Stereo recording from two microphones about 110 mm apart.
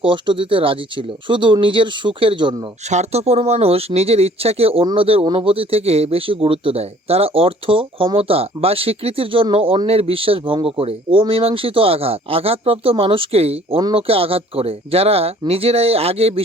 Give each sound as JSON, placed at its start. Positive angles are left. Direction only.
{"t": 0.0, "sound": "speech", "side_deg": -50}
{"t": 2.9, "sound": "speech", "side_deg": -85}